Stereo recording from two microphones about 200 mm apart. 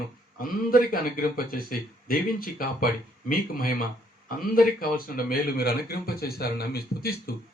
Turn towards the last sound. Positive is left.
turn(degrees=50)  # may be behind; listen again after turning